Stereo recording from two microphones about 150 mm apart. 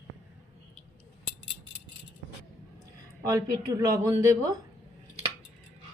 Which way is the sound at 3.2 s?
25° right (ahead or behind).